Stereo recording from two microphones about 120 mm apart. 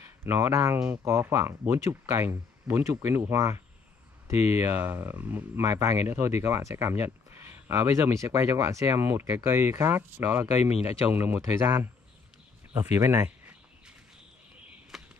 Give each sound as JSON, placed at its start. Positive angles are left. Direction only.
{"t": 0.2, "sound": "speech", "side_deg": -25}
{"t": 5.6, "sound": "speech", "side_deg": -25}
{"t": 10.6, "sound": "speech", "side_deg": 60}
{"t": 11.1, "sound": "speech", "side_deg": -15}
{"t": 14.9, "sound": "a sound", "side_deg": 0}